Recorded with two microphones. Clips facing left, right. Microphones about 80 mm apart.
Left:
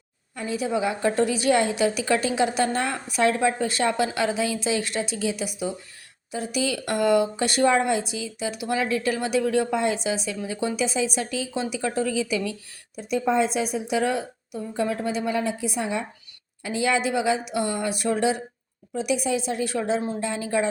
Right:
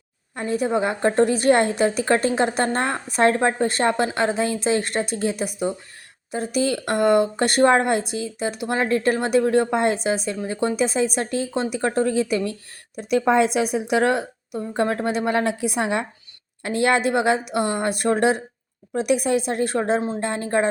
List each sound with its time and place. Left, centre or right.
0.3 s speech: right
13.0 s a woman's voice: right